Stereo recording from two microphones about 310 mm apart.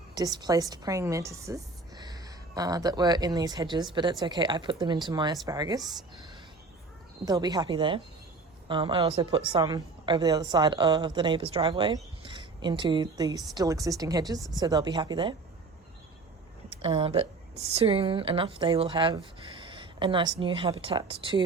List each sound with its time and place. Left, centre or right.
0.1 s a woman's voice: centre
7.3 s a woman's voice: centre
16.8 s a woman's voice: centre